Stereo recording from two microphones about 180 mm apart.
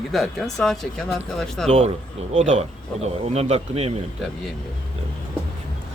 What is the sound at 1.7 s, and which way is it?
A man's voice, 35° right (ahead or behind).